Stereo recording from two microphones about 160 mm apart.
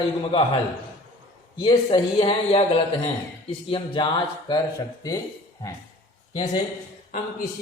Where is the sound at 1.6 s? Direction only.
30° left (ahead or behind).